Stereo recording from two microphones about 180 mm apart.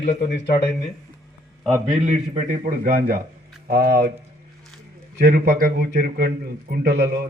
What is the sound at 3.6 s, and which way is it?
Speech, 60° right (ahead or behind).